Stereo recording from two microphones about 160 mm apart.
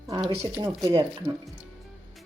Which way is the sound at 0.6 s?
20° right (ahead or behind).